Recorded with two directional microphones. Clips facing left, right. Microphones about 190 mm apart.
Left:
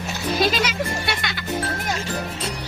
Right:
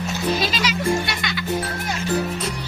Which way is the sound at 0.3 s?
55° left (ahead or behind).